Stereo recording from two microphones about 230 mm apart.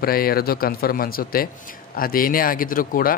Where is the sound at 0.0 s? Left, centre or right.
Left.